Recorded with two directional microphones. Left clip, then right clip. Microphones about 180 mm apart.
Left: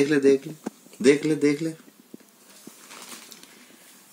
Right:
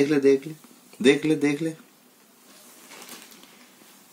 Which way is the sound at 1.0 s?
15° right (ahead or behind).